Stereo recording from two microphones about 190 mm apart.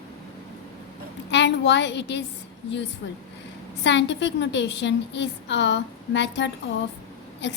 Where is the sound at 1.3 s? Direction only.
65° left (ahead or behind).